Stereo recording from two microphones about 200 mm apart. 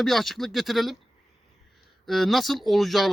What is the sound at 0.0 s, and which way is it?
Speech, centre (ahead or behind).